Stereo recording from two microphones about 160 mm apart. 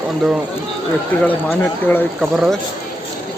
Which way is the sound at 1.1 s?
10° left (ahead or behind).